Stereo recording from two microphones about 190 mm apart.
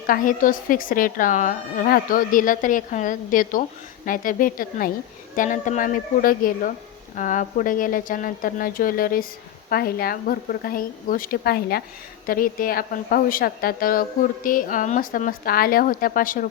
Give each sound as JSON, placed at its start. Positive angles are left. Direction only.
{"t": 0.1, "sound": "speech", "side_deg": 45}